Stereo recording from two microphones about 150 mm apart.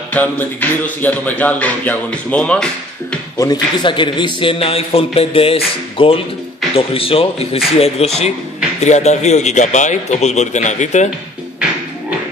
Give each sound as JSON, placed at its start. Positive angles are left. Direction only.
{"t": 0.1, "sound": "music", "side_deg": 10}
{"t": 3.3, "sound": "a man's voice", "side_deg": 30}